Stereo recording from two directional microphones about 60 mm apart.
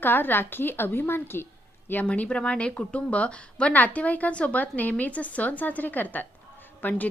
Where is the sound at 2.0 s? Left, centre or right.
Left.